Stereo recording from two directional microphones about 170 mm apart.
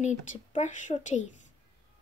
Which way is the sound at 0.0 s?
45° left (ahead or behind).